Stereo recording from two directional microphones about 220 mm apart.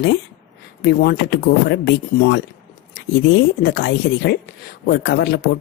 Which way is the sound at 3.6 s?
45° left (ahead or behind).